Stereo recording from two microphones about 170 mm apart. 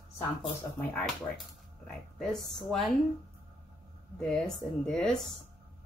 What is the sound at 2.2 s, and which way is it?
Speech, centre (ahead or behind).